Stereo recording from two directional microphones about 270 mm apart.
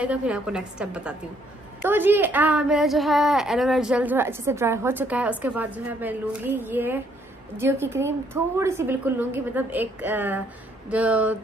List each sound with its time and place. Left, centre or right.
0.0 s a woman's voice: centre